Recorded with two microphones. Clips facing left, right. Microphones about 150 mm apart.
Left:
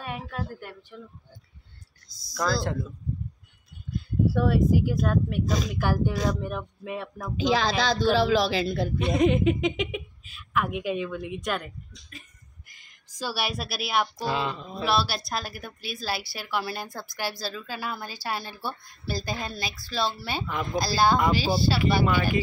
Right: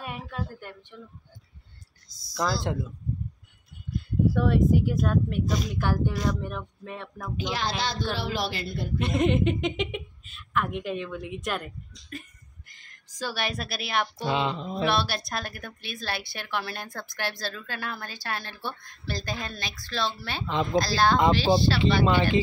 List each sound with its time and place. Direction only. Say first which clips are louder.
0.0 s a woman's voice: left 1 dB; centre (ahead or behind)
2.0 s speech: left 1 dB; 35° left (ahead or behind)
2.3 s speech: left 1 dB; 15° right (ahead or behind)
4.3 s a woman's voice: even; 5° left (ahead or behind)
7.6 s speech: left 6 dB; 90° left
8.9 s a woman's voice: left 1 dB; centre (ahead or behind)
12.6 s a sound: right 2 dB; 10° left (ahead or behind)
14.1 s a sound: right 1 dB; 20° right (ahead or behind)
14.9 s a woman's voice: left 3 dB; 5° left (ahead or behind)
22.0 s a sound: right 2 dB; 25° right (ahead or behind)